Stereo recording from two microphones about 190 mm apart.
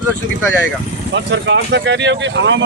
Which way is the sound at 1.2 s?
70° right (ahead or behind).